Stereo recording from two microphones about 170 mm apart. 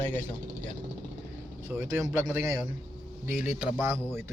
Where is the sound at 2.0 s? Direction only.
20° right (ahead or behind).